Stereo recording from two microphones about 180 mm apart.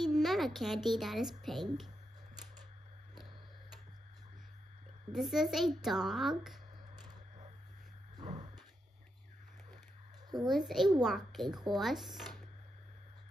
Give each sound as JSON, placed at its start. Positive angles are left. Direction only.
{"t": 0.0, "sound": "a child's voice", "side_deg": 0}
{"t": 5.1, "sound": "speech", "side_deg": 0}
{"t": 8.2, "sound": "a sound", "side_deg": -25}
{"t": 10.5, "sound": "speech", "side_deg": 0}